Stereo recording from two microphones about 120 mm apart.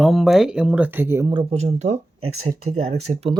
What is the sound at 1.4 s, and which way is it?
Speech, 65° right (ahead or behind).